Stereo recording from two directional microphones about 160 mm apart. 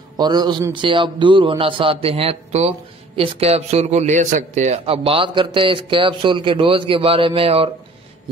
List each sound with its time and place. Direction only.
0.2 s a man's voice: 25° right (ahead or behind)